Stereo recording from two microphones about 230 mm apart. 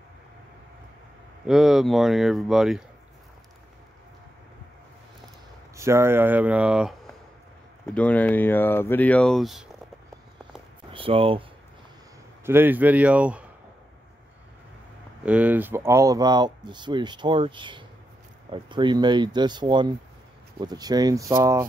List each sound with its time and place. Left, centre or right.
1.4 s speech: centre
5.8 s speech: centre
10.9 s speech: right
12.4 s speech: centre
15.2 s speech: centre